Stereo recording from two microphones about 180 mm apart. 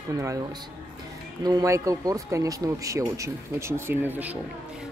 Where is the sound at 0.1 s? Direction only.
15° right (ahead or behind).